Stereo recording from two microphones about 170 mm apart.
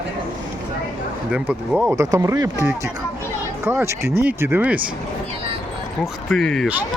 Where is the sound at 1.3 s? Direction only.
10° right (ahead or behind).